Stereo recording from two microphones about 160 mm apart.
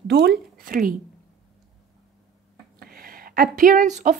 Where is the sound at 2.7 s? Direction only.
65° right (ahead or behind); by 4.1 s 50° right (ahead or behind).